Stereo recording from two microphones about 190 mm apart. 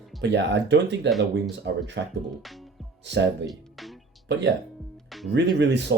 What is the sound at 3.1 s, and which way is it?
Speech, 65° right (ahead or behind).